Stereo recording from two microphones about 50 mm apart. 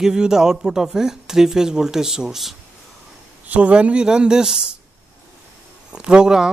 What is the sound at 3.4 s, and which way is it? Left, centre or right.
Speech, right.